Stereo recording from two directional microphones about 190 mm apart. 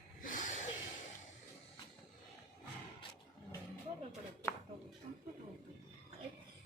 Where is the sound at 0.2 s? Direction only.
45° left (ahead or behind).